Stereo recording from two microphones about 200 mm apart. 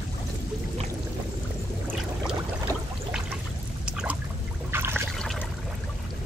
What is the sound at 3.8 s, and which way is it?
Pour, 5° right (ahead or behind).